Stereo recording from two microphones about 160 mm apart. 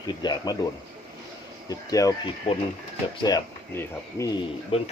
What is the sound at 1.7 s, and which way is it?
Speech, 20° left (ahead or behind).